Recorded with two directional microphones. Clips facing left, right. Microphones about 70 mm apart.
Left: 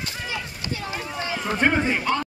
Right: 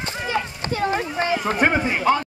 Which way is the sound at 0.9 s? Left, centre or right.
Right.